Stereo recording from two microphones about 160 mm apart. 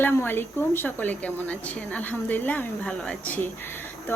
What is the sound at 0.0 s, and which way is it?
Speech, 15° left (ahead or behind).